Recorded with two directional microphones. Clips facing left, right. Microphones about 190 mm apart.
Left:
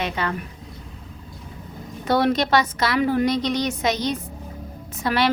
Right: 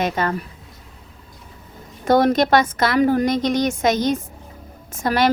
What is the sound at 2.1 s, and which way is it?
A woman's voice, 45° right (ahead or behind).